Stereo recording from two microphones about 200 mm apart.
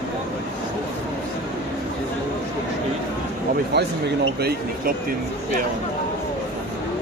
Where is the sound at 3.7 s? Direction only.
55° right (ahead or behind).